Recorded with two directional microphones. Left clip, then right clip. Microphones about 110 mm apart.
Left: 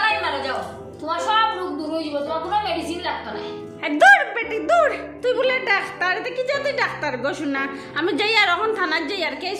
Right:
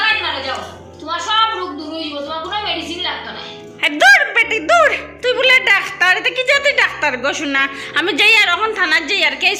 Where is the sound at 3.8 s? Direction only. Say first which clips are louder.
Right 3 dB; centre (ahead or behind).